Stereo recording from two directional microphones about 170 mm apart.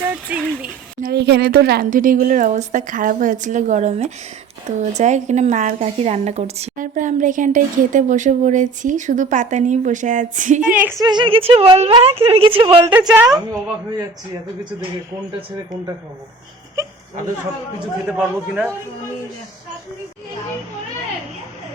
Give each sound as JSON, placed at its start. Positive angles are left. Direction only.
{"t": 0.0, "sound": "speech", "side_deg": -10}
{"t": 1.1, "sound": "a woman's voice", "side_deg": -80}
{"t": 10.6, "sound": "a man's voice", "side_deg": -10}
{"t": 11.0, "sound": "a woman's voice", "side_deg": -25}
{"t": 13.1, "sound": "a woman's voice", "side_deg": -5}
{"t": 18.0, "sound": "a man's voice", "side_deg": -5}